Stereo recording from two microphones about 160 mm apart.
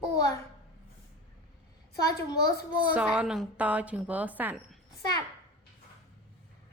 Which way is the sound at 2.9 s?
10° right (ahead or behind).